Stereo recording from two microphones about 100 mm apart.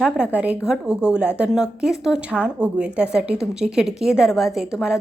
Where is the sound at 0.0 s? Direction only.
10° right (ahead or behind).